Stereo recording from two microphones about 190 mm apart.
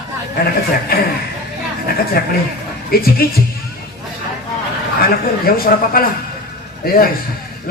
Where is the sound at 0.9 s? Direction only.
55° left (ahead or behind).